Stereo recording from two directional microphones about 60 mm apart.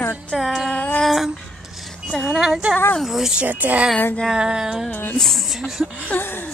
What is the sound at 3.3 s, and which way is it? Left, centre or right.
Speech, right.